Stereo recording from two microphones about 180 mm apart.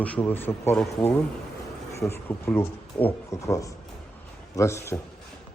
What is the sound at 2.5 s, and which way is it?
A man's voice, 10° left (ahead or behind).